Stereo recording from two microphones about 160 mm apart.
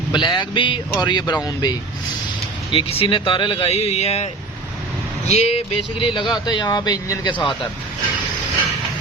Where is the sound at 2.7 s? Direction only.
35° left (ahead or behind).